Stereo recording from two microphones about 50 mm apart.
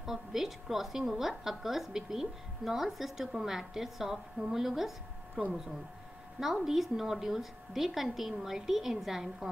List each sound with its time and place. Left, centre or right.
0.0 s a woman's voice: centre
5.4 s speech: right
6.4 s a woman's voice: centre